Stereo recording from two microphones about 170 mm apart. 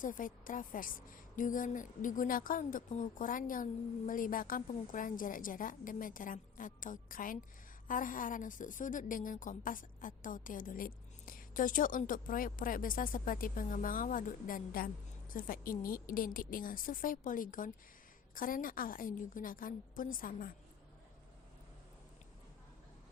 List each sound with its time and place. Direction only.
0.0 s a woman's voice: 50° left (ahead or behind)